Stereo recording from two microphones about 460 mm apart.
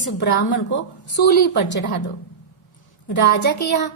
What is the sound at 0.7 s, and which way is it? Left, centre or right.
Speech, left.